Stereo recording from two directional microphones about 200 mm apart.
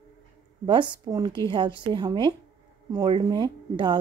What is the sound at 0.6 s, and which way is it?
Speech, 25° right (ahead or behind).